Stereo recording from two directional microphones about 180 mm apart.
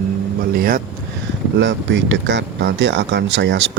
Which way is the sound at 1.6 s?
90° right.